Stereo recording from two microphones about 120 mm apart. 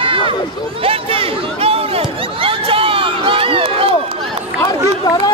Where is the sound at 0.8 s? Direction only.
50° right (ahead or behind).